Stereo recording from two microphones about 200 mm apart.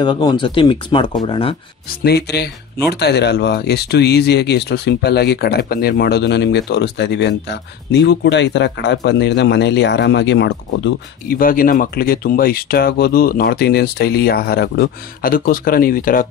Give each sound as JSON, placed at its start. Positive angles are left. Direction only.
{"t": 0.0, "sound": "speech", "side_deg": 20}
{"t": 2.0, "sound": "speech", "side_deg": 55}
{"t": 11.3, "sound": "speech", "side_deg": 45}